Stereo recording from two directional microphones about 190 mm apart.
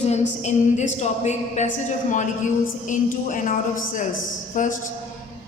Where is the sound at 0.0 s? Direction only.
35° left (ahead or behind).